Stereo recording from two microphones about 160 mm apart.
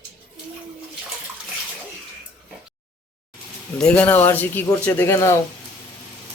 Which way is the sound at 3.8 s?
10° left (ahead or behind).